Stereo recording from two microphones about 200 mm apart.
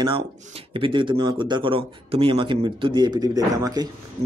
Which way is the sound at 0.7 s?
25° right (ahead or behind).